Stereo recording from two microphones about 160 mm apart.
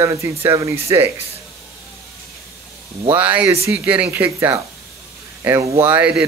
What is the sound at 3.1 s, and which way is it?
Speech, 10° right (ahead or behind).